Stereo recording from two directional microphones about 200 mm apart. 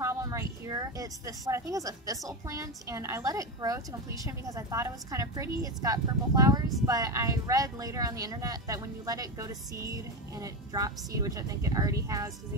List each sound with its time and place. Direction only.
0.0 s speech: 15° right (ahead or behind)